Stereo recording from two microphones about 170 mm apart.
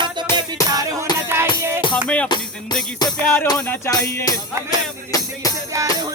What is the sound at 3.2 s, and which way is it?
Music, 10° left (ahead or behind).